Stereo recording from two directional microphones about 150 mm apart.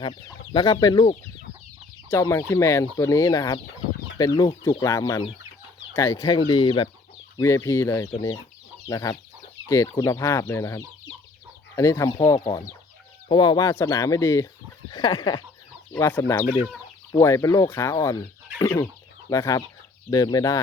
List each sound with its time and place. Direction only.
0.5 s speech: 25° left (ahead or behind)
7.3 s speech: 20° left (ahead or behind)
14.8 s speech: 30° left (ahead or behind)
15.9 s speech: 15° left (ahead or behind)
19.3 s speech: 20° left (ahead or behind)